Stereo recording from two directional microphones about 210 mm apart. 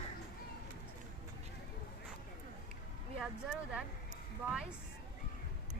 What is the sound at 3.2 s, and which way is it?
Speech, 5° right (ahead or behind).